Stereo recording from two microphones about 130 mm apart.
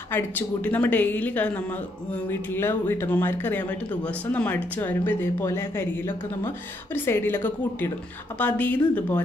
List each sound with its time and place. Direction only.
0.1 s speech: 15° left (ahead or behind)